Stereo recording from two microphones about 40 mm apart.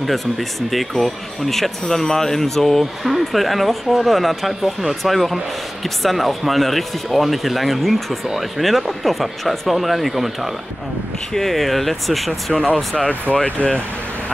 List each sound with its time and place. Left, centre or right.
0.0 s speech: centre
13.3 s speech: left